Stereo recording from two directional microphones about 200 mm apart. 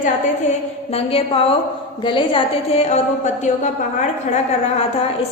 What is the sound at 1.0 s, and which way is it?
A woman's voice, 30° left (ahead or behind).